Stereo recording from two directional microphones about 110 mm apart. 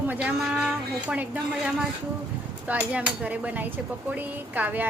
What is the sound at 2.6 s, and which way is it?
Speech, 15° right (ahead or behind).